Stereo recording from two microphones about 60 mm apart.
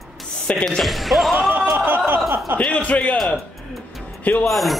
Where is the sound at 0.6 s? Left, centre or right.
Centre.